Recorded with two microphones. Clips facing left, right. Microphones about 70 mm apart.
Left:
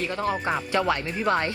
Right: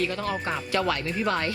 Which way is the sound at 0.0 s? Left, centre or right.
Left.